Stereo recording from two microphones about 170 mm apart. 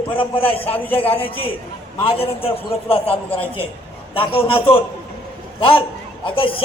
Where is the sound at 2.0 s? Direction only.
35° left (ahead or behind).